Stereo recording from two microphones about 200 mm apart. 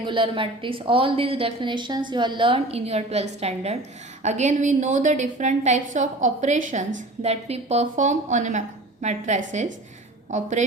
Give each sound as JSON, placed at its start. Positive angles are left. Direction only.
{"t": 0.0, "sound": "a woman's voice", "side_deg": -25}